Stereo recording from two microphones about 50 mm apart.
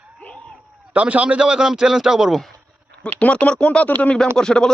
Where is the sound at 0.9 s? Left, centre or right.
Right; by 2.3 s centre.